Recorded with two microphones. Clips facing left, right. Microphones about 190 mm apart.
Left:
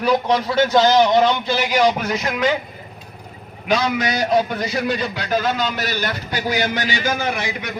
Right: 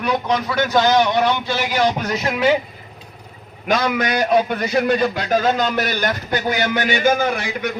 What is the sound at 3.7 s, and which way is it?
A man's voice, 55° right (ahead or behind).